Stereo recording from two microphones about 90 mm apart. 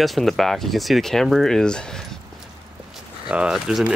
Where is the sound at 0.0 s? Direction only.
Centre (ahead or behind).